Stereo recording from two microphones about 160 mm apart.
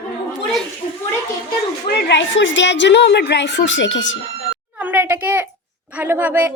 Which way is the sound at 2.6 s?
90° left.